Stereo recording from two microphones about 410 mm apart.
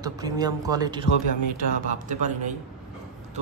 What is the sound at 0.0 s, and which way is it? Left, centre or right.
A man's voice, centre.